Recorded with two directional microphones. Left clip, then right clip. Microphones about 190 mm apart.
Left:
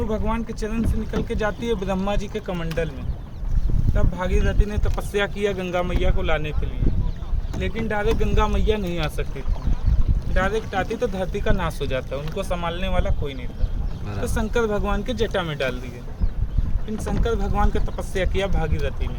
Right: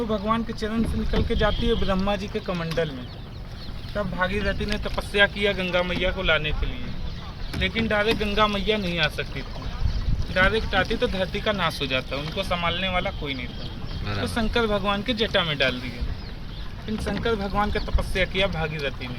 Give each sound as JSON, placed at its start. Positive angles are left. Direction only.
{"t": 0.1, "sound": "speech", "side_deg": 20}
{"t": 4.2, "sound": "speech", "side_deg": 50}
{"t": 7.9, "sound": "speech", "side_deg": 60}
{"t": 10.3, "sound": "speech", "side_deg": 60}
{"t": 17.4, "sound": "speech", "side_deg": 40}